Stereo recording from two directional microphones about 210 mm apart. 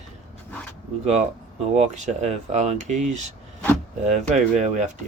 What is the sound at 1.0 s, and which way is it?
Speech, 30° right (ahead or behind).